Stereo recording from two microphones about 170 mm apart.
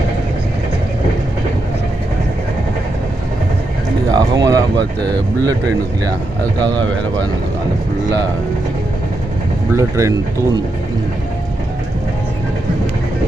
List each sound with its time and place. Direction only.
4.1 s speech: 20° right (ahead or behind)
9.7 s speech: 20° right (ahead or behind)